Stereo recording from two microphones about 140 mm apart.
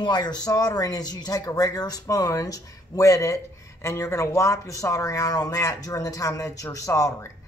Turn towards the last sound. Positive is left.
turn(degrees=20)  # may be behind; listen again after turning